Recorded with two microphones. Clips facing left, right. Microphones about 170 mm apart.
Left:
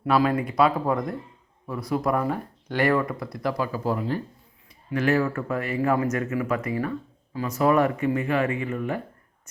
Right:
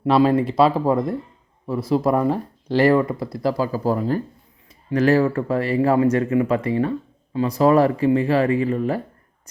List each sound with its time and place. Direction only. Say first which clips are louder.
0.0 s speech: right 6 dB; 25° right (ahead or behind)